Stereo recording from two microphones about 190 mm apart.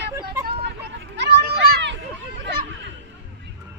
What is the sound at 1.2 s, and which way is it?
Children playing, 60° right (ahead or behind).